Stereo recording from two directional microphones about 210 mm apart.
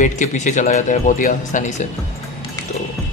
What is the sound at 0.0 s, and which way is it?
Speech, 35° left (ahead or behind).